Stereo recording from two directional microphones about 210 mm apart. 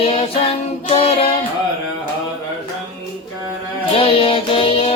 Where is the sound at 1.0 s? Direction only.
25° left (ahead or behind).